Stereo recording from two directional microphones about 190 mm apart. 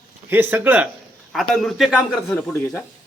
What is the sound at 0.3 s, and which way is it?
A man's voice, 10° right (ahead or behind).